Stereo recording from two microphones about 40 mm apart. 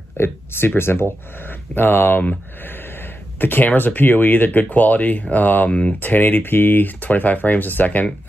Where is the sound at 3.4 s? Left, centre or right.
Left.